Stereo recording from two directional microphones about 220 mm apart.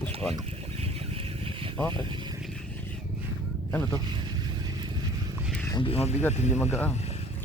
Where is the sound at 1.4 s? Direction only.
25° right (ahead or behind).